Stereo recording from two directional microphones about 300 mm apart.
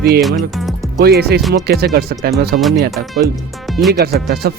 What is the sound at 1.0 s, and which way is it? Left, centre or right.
Speech, right.